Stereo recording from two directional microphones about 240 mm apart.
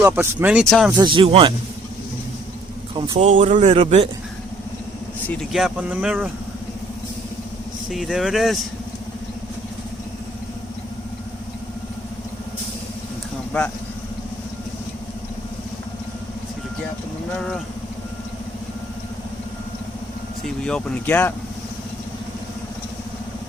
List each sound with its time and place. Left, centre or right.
0.0 s speech: centre
0.9 s a man's voice: centre
2.9 s a man's voice: right
5.3 s speech: centre
7.9 s speech: centre
20.7 s speech: centre